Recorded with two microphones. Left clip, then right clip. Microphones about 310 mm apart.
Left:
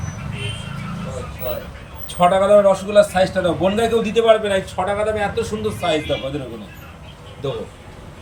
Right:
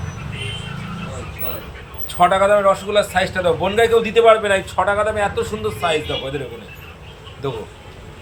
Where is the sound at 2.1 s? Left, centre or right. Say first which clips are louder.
Right 1 dB; centre.